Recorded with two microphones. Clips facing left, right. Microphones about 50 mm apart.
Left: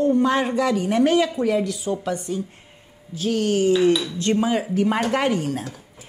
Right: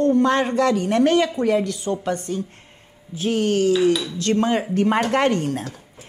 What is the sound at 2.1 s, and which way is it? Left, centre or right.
Speech, centre.